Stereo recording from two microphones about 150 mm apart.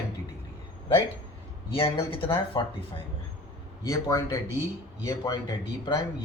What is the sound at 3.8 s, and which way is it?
Speech, 20° left (ahead or behind).